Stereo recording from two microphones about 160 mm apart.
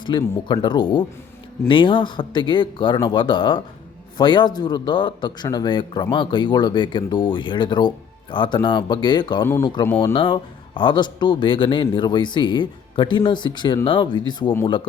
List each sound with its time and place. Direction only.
0.0 s a man's voice: 30° left (ahead or behind)
9.8 s speech: 15° left (ahead or behind)
10.1 s a man's voice: 30° left (ahead or behind)